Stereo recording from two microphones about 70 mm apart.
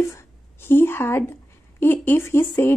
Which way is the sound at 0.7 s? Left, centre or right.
Left.